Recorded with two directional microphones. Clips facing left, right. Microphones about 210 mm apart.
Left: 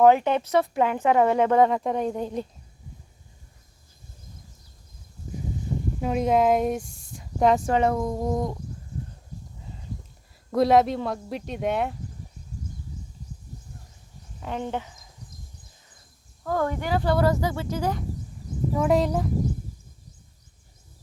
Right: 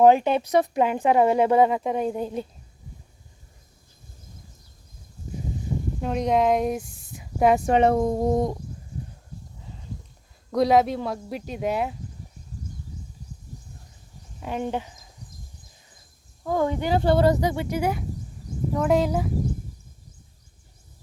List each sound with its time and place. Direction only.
0.0 s speech: 20° right (ahead or behind)
6.0 s speech: 5° left (ahead or behind)
7.7 s a sound: 20° right (ahead or behind)
10.5 s speech: centre (ahead or behind)
14.4 s speech: 15° right (ahead or behind)
16.4 s speech: 15° right (ahead or behind)
18.7 s speech: centre (ahead or behind)